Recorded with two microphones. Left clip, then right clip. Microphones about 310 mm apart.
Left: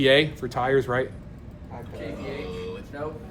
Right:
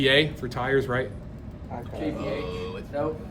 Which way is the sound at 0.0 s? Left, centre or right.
Centre.